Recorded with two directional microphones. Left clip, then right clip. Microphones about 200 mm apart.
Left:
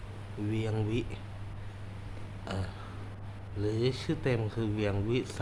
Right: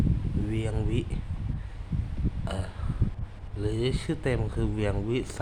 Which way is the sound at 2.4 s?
Centre (ahead or behind).